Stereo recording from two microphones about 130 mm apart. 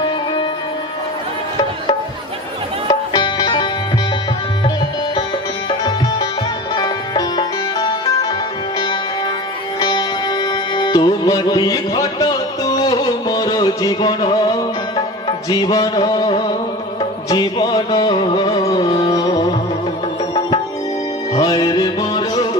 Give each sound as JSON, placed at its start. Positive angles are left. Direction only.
{"t": 3.1, "sound": "music", "side_deg": 30}
{"t": 5.6, "sound": "music", "side_deg": 30}
{"t": 9.8, "sound": "music", "side_deg": 30}
{"t": 15.4, "sound": "a sound", "side_deg": 30}
{"t": 16.3, "sound": "music", "side_deg": 35}
{"t": 21.3, "sound": "music", "side_deg": 30}